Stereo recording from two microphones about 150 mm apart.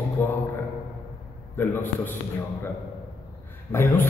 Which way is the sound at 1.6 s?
15° left (ahead or behind).